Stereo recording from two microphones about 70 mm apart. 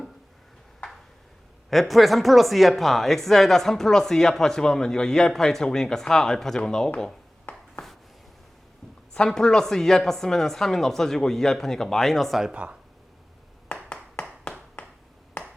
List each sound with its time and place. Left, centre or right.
1.7 s speech: centre
7.5 s a sound: left
9.1 s speech: centre
12.5 s speech: centre
13.9 s clapping: centre
14.8 s finger snapping: left